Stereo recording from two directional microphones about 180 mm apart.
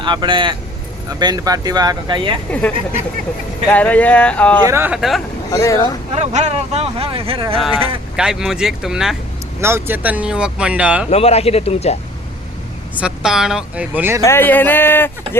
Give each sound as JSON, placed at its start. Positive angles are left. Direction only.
{"t": 0.0, "sound": "speech", "side_deg": -25}
{"t": 2.5, "sound": "speech", "side_deg": 5}
{"t": 4.6, "sound": "speech", "side_deg": -15}
{"t": 4.9, "sound": "speech", "side_deg": 0}
{"t": 5.5, "sound": "speech", "side_deg": 20}
{"t": 6.1, "sound": "speech", "side_deg": -40}
{"t": 8.1, "sound": "speech", "side_deg": -5}
{"t": 9.6, "sound": "speech", "side_deg": -15}
{"t": 11.1, "sound": "a man's voice", "side_deg": 35}
{"t": 13.0, "sound": "speech", "side_deg": -5}
{"t": 14.3, "sound": "speech", "side_deg": 10}